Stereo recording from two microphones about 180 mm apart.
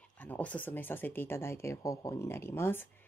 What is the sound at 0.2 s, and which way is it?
Speech, 10° left (ahead or behind).